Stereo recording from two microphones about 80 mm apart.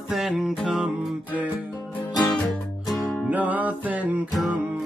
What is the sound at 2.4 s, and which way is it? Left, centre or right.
Music, centre.